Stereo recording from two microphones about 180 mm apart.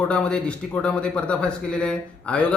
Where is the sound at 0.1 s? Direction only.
5° left (ahead or behind).